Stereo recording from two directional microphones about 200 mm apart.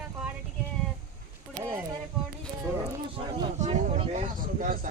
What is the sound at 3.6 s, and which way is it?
Speech, 35° right (ahead or behind).